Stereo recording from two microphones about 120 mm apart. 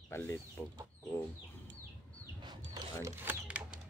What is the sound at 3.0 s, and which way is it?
Mechanisms, 15° right (ahead or behind).